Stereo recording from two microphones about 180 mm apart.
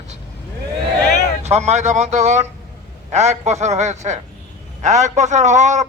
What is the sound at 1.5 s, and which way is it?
A man's voice, 40° right (ahead or behind).